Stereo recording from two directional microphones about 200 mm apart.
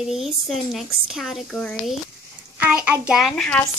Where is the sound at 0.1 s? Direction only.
Centre (ahead or behind).